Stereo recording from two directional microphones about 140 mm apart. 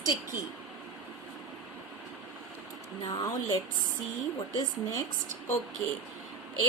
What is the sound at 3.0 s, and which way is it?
A woman's voice, 30° left (ahead or behind).